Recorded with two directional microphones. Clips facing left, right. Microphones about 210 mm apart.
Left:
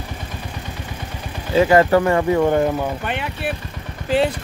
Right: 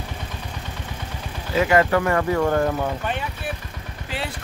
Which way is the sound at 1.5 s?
30° left (ahead or behind).